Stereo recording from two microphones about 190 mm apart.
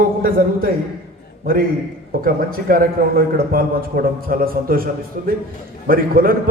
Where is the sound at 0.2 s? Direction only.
50° right (ahead or behind).